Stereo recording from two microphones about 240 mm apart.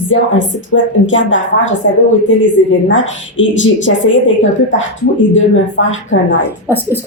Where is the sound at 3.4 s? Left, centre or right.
Left.